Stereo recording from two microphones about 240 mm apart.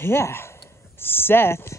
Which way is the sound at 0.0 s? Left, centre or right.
Centre.